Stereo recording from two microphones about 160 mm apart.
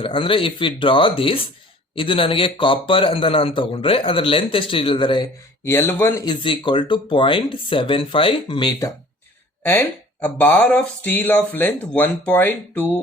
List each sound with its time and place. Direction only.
0.0 s a man's voice: 35° left (ahead or behind)
5.6 s speech: 15° left (ahead or behind)
6.2 s a man's voice: 30° left (ahead or behind)
9.6 s speech: 10° left (ahead or behind)